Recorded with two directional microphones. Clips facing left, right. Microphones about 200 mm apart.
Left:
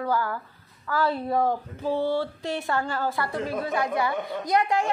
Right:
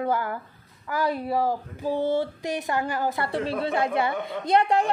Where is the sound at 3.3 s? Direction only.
30° right (ahead or behind).